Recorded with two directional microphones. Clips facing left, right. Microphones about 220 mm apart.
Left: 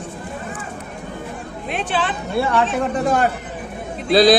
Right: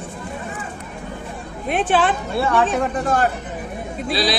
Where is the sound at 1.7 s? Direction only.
50° right (ahead or behind).